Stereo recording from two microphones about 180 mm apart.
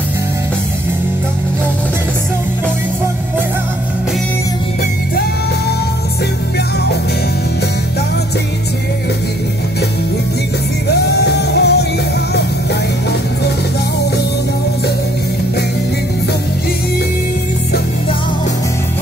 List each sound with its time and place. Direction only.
10.9 s music: 65° left (ahead or behind)